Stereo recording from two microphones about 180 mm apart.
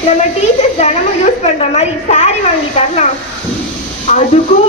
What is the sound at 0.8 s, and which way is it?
A woman's voice, 35° left (ahead or behind).